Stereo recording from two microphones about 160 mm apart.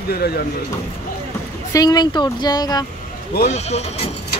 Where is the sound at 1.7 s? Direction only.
25° left (ahead or behind).